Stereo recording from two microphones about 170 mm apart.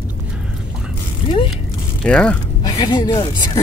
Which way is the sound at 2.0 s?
5° left (ahead or behind).